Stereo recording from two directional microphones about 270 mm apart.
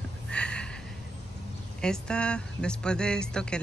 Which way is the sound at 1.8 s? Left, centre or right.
Centre.